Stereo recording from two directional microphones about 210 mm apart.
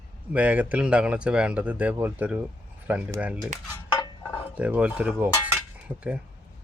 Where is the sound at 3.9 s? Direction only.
20° left (ahead or behind).